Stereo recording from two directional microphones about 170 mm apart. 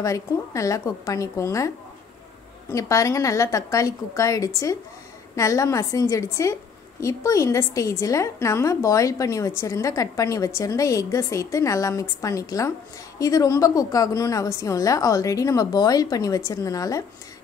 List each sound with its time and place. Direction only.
0.0 s a woman's voice: 20° left (ahead or behind)
2.7 s a woman's voice: 20° left (ahead or behind)